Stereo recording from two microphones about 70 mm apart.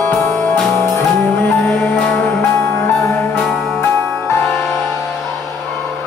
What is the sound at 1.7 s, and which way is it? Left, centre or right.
Music, centre.